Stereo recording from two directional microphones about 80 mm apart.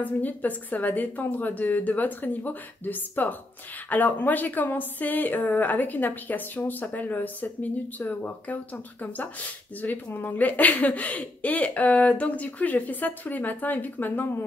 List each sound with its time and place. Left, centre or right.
0.0 s a woman's voice: left
9.8 s a woman's voice: left